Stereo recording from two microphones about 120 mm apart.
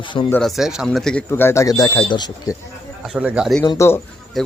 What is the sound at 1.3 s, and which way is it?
Speech, 20° left (ahead or behind).